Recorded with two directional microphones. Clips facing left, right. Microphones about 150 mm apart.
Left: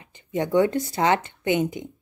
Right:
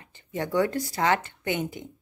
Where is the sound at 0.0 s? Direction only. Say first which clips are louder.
Left 5 dB; 20° left (ahead or behind).